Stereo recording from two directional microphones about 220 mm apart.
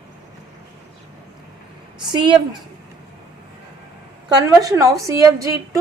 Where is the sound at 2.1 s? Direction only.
20° right (ahead or behind).